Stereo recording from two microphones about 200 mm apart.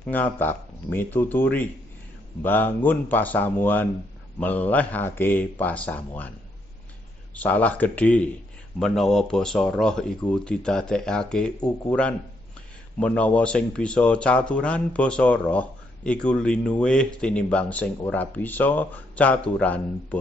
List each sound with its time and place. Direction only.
0.0 s speech: 10° left (ahead or behind)
7.3 s speech: 10° left (ahead or behind)